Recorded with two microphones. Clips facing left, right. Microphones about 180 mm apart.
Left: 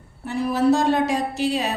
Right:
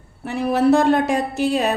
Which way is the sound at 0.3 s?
65° right (ahead or behind).